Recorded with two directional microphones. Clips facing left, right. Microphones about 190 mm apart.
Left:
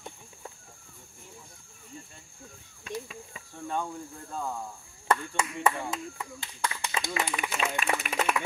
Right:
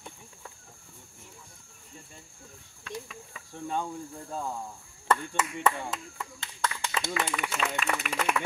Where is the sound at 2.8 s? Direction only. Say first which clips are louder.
Left 3 dB; 20° left (ahead or behind).